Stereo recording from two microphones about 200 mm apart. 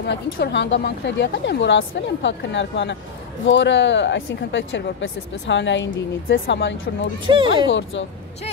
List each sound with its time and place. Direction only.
0.0 s speech: 60° left (ahead or behind)
7.2 s speech: 25° right (ahead or behind)
7.6 s speech: 65° left (ahead or behind)